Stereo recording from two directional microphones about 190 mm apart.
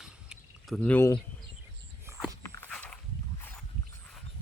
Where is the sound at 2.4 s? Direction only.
10° left (ahead or behind).